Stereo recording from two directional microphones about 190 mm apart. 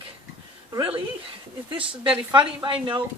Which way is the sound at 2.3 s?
25° right (ahead or behind).